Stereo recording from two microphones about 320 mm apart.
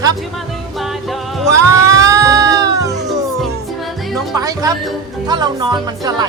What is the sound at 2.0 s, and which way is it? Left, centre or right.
Music, centre.